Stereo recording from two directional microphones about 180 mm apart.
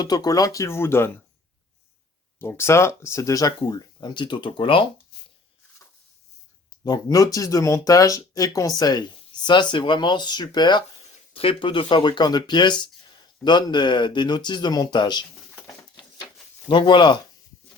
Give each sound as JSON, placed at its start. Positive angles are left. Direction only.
{"t": 0.0, "sound": "speech", "side_deg": 20}
{"t": 2.4, "sound": "speech", "side_deg": 15}
{"t": 5.1, "sound": "a sound", "side_deg": 65}
{"t": 6.8, "sound": "speech", "side_deg": 20}
{"t": 16.6, "sound": "speech", "side_deg": 25}